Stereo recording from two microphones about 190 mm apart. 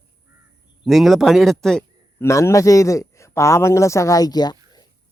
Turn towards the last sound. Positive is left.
turn(degrees=20)  # may be behind; listen again after turning